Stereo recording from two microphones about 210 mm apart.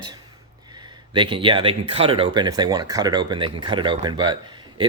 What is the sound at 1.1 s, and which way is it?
Speech, 25° right (ahead or behind).